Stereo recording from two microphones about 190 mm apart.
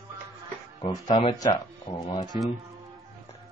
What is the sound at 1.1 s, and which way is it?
Speech, 25° left (ahead or behind).